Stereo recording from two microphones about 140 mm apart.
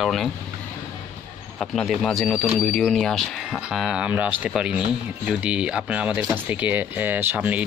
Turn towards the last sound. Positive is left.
turn(degrees=-10)  # may be behind; listen again after turning